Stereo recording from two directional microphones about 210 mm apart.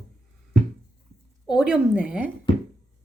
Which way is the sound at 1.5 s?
5° right (ahead or behind).